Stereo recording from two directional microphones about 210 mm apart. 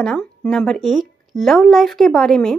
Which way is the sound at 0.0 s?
5° left (ahead or behind).